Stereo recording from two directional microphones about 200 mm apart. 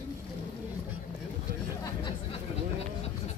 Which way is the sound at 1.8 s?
25° left (ahead or behind).